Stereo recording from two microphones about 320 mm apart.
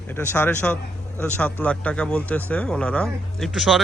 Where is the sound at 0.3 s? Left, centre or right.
Centre.